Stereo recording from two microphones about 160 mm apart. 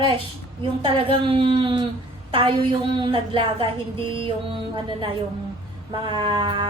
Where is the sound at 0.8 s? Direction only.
35° right (ahead or behind).